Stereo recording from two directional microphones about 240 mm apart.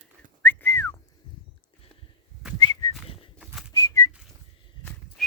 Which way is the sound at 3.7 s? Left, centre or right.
Centre.